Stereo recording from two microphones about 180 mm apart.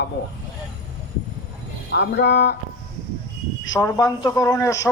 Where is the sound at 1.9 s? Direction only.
70° left (ahead or behind).